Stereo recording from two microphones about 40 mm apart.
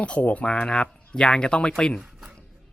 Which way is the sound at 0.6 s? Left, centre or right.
Left.